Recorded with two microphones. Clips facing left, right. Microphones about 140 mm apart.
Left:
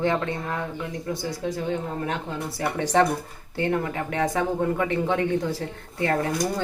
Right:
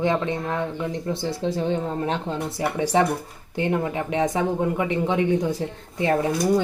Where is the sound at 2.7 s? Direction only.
10° right (ahead or behind).